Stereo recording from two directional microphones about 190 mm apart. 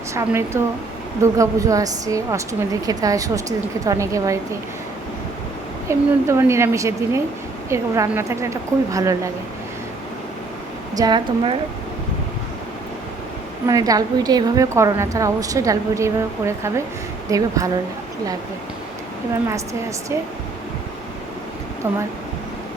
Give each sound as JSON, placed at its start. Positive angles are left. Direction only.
{"t": 0.1, "sound": "a woman's voice", "side_deg": -15}
{"t": 5.9, "sound": "a woman's voice", "side_deg": -15}
{"t": 10.9, "sound": "a woman's voice", "side_deg": -20}
{"t": 13.7, "sound": "a woman's voice", "side_deg": -20}
{"t": 21.8, "sound": "a woman's voice", "side_deg": -15}